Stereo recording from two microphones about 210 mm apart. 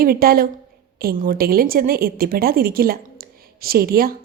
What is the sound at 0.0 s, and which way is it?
A woman's voice, 45° right (ahead or behind).